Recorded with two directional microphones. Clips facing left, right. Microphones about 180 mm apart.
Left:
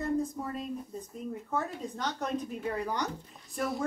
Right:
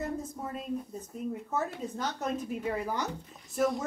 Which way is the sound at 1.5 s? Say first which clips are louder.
Left 2 dB; 5° right (ahead or behind).